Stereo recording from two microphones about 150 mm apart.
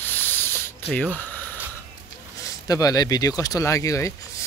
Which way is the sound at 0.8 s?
10° left (ahead or behind).